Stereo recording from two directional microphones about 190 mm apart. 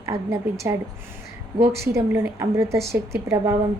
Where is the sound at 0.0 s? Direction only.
15° right (ahead or behind).